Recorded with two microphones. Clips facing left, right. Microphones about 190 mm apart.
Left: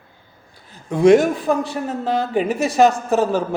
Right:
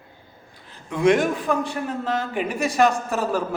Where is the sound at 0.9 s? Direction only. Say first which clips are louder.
Left 6 dB; 40° left (ahead or behind).